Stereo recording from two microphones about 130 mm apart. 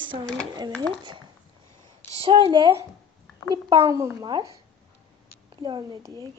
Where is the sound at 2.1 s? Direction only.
45° right (ahead or behind).